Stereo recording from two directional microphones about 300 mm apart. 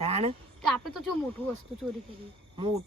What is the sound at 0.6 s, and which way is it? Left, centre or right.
Speech, centre.